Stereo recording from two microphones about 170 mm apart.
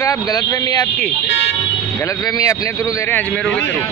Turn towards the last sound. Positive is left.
turn(degrees=10)  # may be behind; listen again after turning